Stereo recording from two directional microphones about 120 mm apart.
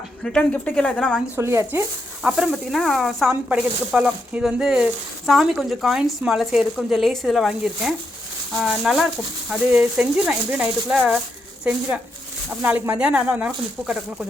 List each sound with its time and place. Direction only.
0.2 s a woman's voice: 5° left (ahead or behind)
1.4 s speech: 20° right (ahead or behind)
2.2 s speech: 5° right (ahead or behind)